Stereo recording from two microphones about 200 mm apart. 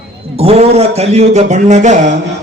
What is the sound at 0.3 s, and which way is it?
A man's voice, 30° right (ahead or behind).